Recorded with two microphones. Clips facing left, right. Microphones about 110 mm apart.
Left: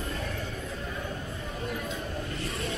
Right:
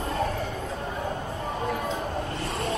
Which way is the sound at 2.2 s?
35° right (ahead or behind).